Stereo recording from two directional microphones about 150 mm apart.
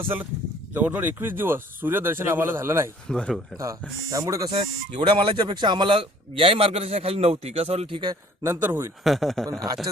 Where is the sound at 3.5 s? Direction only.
20° right (ahead or behind).